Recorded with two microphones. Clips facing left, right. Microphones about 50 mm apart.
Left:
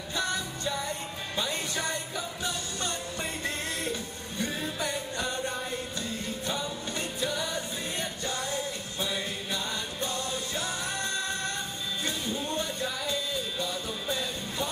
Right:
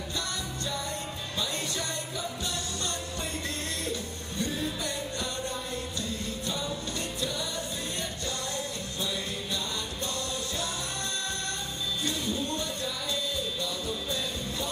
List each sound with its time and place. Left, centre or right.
1.3 s music: left
4.4 s music: centre
7.2 s music: left
9.0 s music: left
12.4 s music: centre